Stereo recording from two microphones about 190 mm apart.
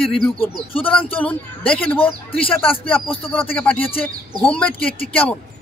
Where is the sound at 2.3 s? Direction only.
30° left (ahead or behind).